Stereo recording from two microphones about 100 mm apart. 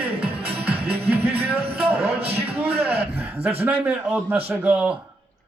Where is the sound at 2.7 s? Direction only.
80° right.